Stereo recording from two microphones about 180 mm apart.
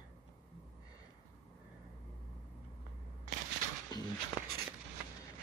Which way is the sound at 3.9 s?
25° left (ahead or behind).